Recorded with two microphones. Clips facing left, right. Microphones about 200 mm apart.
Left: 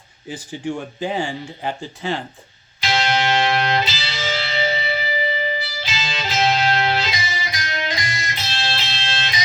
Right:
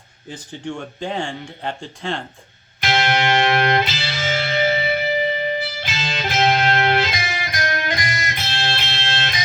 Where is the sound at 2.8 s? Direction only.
55° right (ahead or behind).